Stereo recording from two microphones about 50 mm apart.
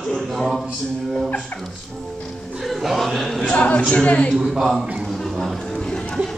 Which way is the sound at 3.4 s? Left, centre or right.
Centre.